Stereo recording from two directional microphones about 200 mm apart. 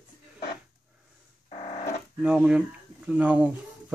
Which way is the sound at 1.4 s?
40° left (ahead or behind).